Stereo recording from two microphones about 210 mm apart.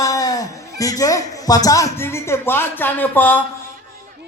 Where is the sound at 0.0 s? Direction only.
15° left (ahead or behind).